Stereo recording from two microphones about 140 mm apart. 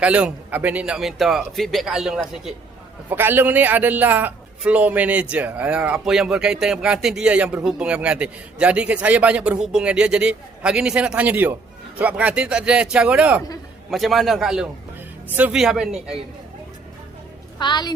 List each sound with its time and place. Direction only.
0.0 s a man's voice: 10° right (ahead or behind)
3.1 s a man's voice: 15° right (ahead or behind)
17.6 s a woman's voice: 30° left (ahead or behind)